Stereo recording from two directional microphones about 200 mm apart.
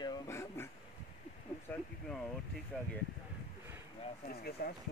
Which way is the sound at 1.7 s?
5° left (ahead or behind).